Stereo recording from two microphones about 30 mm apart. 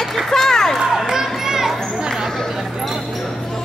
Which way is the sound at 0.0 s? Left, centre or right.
Centre.